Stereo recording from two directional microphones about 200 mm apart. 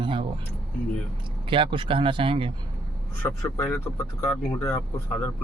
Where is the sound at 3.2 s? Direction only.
15° left (ahead or behind).